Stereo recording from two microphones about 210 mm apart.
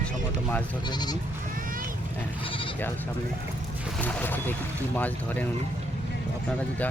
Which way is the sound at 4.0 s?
10° left (ahead or behind).